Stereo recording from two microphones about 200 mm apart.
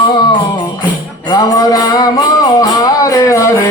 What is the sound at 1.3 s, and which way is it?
Music, 20° left (ahead or behind).